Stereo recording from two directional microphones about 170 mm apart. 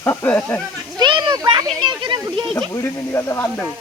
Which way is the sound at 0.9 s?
30° right (ahead or behind).